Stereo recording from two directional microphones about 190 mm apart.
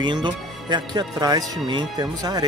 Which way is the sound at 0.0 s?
25° right (ahead or behind).